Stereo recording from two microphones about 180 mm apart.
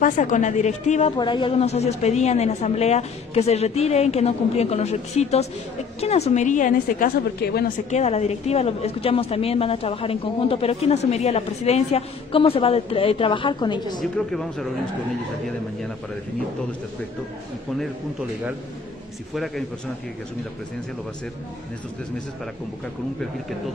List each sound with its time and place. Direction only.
0.0 s a woman's voice: 45° left (ahead or behind)
1.1 s a woman's voice: 25° left (ahead or behind); by 7.7 s 55° left (ahead or behind)
7.9 s a woman's voice: 35° left (ahead or behind)
14.1 s speech: centre (ahead or behind)
19.3 s speech: centre (ahead or behind)